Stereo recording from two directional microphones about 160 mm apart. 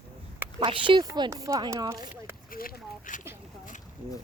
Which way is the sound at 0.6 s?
30° right (ahead or behind).